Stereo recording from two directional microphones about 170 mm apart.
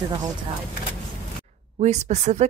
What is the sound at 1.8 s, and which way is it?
Speech, 40° right (ahead or behind).